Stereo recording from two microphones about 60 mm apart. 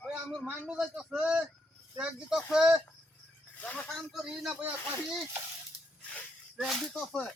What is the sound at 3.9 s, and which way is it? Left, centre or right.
Speech, centre.